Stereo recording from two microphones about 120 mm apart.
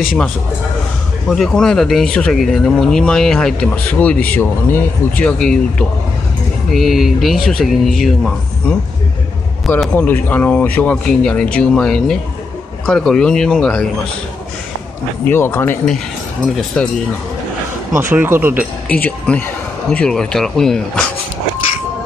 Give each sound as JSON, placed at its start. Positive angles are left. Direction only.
{"t": 1.3, "sound": "speech", "side_deg": 5}
{"t": 9.9, "sound": "speech", "side_deg": 15}
{"t": 15.2, "sound": "speech", "side_deg": 20}
{"t": 17.9, "sound": "speech", "side_deg": -15}
{"t": 18.9, "sound": "speech", "side_deg": 10}